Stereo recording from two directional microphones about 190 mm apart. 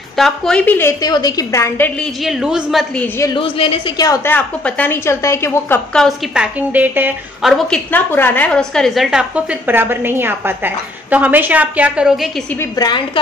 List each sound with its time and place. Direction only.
0.2 s a woman's voice: 5° left (ahead or behind)
2.2 s a woman's voice: centre (ahead or behind)
3.3 s a woman's voice: 30° left (ahead or behind)
4.1 s a woman's voice: 10° left (ahead or behind)
5.9 s a woman's voice: centre (ahead or behind)
7.5 s a woman's voice: 5° left (ahead or behind)
12.7 s a woman's voice: 25° left (ahead or behind)